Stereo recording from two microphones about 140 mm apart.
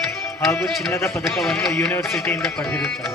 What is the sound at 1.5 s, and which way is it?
Speech, 20° left (ahead or behind).